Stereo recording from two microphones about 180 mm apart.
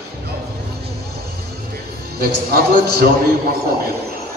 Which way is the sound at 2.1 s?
55° right (ahead or behind).